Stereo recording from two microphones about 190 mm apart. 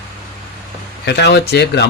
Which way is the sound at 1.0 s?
60° left (ahead or behind).